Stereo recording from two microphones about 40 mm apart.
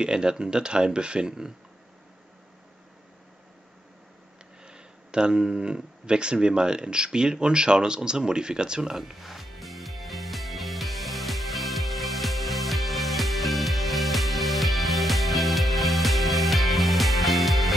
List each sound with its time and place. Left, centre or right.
0.0 s speech: right
4.6 s speech: right
8.9 s music: centre